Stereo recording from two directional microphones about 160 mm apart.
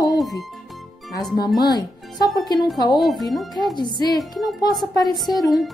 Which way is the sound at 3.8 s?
25° left (ahead or behind).